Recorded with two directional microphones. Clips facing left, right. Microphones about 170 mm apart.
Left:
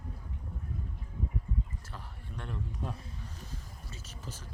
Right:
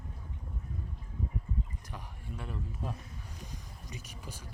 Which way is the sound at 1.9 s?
5° right (ahead or behind).